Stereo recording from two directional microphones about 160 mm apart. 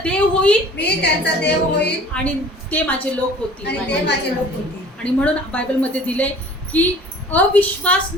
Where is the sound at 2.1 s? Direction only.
10° left (ahead or behind).